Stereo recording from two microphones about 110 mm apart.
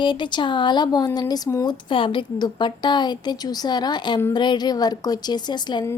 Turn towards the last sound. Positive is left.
turn(degrees=40)  # may be behind; listen again after turning